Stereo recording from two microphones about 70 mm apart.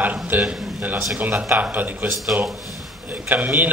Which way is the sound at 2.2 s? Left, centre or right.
Centre.